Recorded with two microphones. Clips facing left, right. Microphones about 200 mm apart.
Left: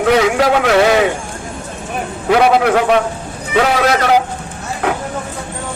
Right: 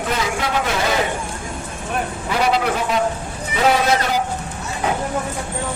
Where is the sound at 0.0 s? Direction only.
75° left (ahead or behind).